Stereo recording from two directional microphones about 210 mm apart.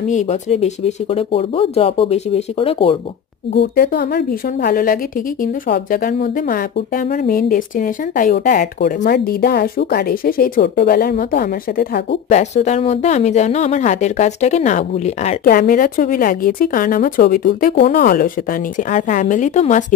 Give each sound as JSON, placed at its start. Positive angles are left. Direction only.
{"t": 0.1, "sound": "speech", "side_deg": 35}
{"t": 3.5, "sound": "speech", "side_deg": 50}
{"t": 12.3, "sound": "a woman's voice", "side_deg": 35}